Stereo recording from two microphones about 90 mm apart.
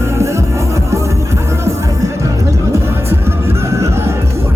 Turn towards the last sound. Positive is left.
turn(degrees=-30)  # may be behind; listen again after turning